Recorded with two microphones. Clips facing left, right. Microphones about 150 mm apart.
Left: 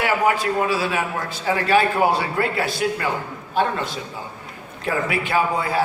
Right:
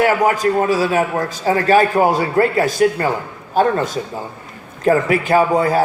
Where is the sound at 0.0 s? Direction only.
40° right (ahead or behind).